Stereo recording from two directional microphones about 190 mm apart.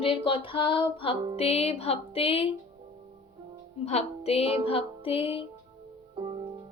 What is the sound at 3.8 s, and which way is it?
Speech, 35° left (ahead or behind).